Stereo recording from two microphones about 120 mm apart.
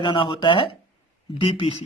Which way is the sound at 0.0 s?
40° left (ahead or behind).